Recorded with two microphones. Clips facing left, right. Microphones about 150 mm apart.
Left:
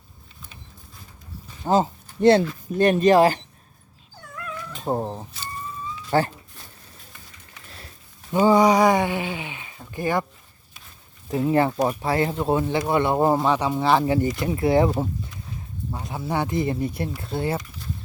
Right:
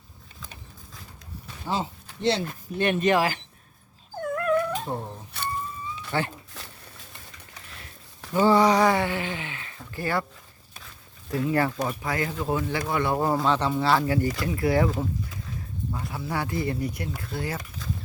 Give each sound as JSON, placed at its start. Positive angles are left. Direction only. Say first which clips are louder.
{"t": 1.6, "sound": "speech", "louder": "left 9 dB", "side_deg": 45}
{"t": 4.2, "sound": "dog", "louder": "right 13 dB", "side_deg": -55}
{"t": 5.3, "sound": "a sound", "louder": "right 5 dB", "side_deg": -60}
{"t": 6.1, "sound": "speech", "louder": "left 7 dB", "side_deg": 40}
{"t": 6.6, "sound": "a sound", "louder": "right 4 dB", "side_deg": -90}
{"t": 8.3, "sound": "speech", "louder": "left 3 dB", "side_deg": 15}
{"t": 11.4, "sound": "speech", "louder": "left 5 dB", "side_deg": 30}